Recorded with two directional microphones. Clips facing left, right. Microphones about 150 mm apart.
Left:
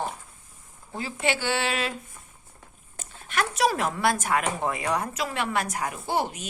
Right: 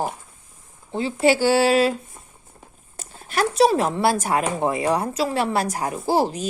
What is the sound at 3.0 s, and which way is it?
Speech, 35° right (ahead or behind).